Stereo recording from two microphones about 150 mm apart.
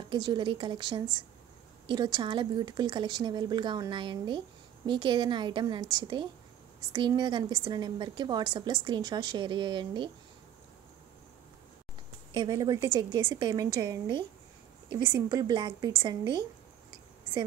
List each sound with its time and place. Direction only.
0.1 s a woman's voice: 30° right (ahead or behind)
12.4 s a woman's voice: 25° right (ahead or behind)